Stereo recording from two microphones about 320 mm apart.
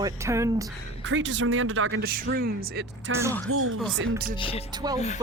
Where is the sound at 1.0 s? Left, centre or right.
Right.